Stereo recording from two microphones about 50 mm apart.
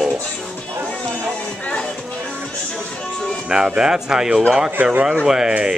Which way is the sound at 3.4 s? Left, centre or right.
Centre.